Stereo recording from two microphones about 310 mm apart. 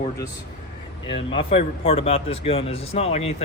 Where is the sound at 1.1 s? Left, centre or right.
Centre.